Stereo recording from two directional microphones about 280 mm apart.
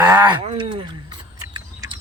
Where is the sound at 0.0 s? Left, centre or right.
Centre.